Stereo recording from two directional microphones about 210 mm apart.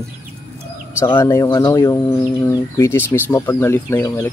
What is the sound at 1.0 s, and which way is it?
Speech, 10° left (ahead or behind).